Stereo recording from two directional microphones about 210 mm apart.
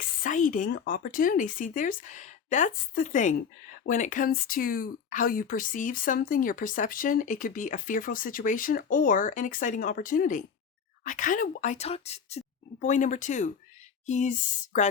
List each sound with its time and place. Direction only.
0.0 s speech: 40° left (ahead or behind)